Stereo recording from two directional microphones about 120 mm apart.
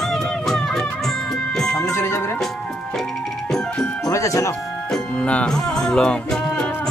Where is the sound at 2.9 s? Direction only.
5° left (ahead or behind).